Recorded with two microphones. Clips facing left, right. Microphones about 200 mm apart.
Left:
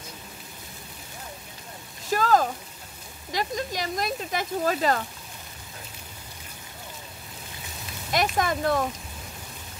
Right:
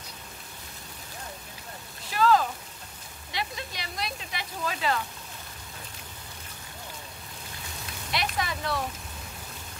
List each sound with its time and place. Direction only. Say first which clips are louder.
2.0 s a sound: left 1 dB; 45° left (ahead or behind)
3.3 s speech: left 7 dB; 45° left (ahead or behind)
8.1 s speech: left 7 dB; 45° left (ahead or behind)